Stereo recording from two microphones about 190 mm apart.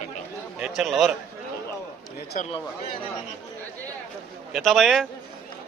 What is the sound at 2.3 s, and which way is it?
Speech, 40° left (ahead or behind).